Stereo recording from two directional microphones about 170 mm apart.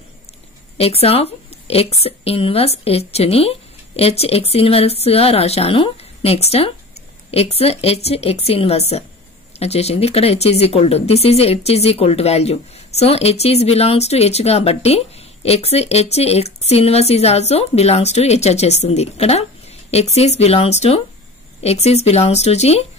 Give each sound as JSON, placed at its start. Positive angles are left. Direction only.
{"t": 0.7, "sound": "speech", "side_deg": 35}